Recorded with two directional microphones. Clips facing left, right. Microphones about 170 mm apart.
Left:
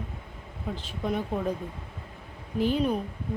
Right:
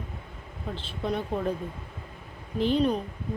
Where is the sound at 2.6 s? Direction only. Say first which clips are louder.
Right 1 dB; 10° left (ahead or behind).